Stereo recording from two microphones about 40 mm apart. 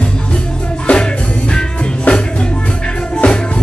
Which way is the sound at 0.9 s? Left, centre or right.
Left.